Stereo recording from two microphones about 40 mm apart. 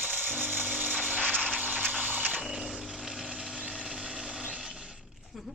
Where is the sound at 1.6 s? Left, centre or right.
Right.